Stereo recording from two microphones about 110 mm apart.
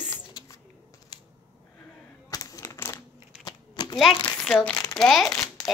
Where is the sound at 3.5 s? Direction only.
40° left (ahead or behind).